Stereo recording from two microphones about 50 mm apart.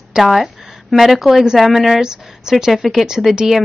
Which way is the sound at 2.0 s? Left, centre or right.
Centre.